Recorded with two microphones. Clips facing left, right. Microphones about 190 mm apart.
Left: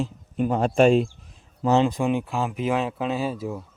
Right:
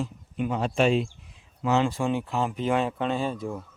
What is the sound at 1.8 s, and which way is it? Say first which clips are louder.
Speech: left 3 dB; 20° left (ahead or behind).